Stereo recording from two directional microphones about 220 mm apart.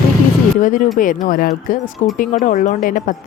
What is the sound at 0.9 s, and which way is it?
Speech, 35° left (ahead or behind).